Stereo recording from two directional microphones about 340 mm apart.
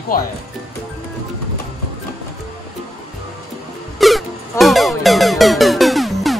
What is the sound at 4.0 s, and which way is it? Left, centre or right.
Music, centre.